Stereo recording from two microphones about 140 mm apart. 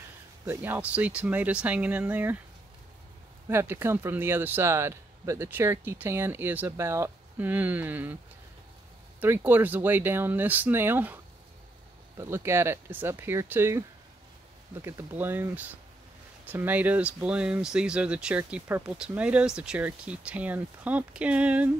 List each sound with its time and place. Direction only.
0.5 s speech: 15° right (ahead or behind)
3.4 s speech: 15° right (ahead or behind)
9.2 s speech: 15° right (ahead or behind)
12.2 s speech: 20° right (ahead or behind)